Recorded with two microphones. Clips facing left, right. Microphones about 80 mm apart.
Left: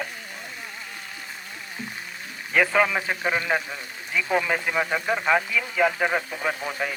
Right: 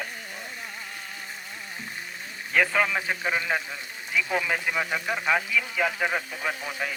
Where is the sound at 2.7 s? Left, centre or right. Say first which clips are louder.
Left 3 dB; left.